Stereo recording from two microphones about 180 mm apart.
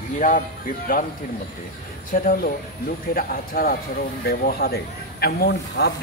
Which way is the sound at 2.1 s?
50° left (ahead or behind).